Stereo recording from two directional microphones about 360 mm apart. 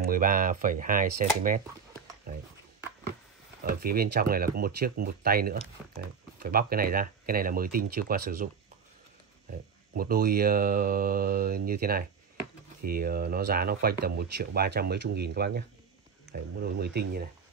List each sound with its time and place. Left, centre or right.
0.0 s speech: right
3.6 s speech: right
9.9 s speech: right